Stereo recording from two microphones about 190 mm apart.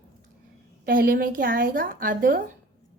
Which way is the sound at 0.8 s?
50° right (ahead or behind).